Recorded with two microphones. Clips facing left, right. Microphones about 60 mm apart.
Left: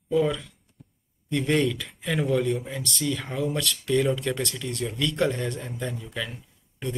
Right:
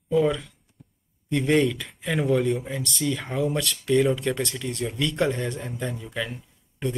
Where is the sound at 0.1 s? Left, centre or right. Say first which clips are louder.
Right 2 dB; centre.